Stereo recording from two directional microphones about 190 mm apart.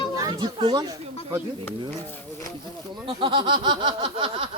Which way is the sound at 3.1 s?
25° right (ahead or behind).